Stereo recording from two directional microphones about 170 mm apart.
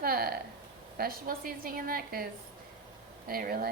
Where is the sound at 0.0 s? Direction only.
60° right (ahead or behind).